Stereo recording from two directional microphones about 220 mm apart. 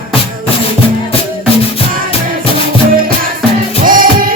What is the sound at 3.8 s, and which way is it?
Music, 40° right (ahead or behind).